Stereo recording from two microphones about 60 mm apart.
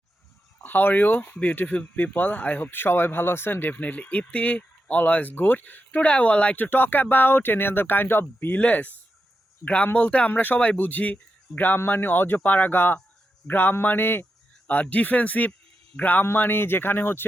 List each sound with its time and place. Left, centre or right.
0.6 s speech: left
2.6 s speech: left; by 6.7 s centre
6.7 s speech: left